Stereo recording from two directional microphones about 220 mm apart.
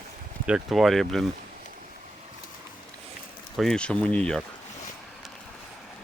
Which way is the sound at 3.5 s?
Centre (ahead or behind).